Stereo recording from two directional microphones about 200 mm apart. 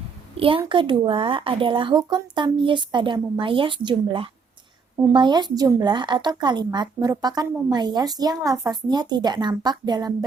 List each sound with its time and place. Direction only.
0.3 s speech: 25° right (ahead or behind)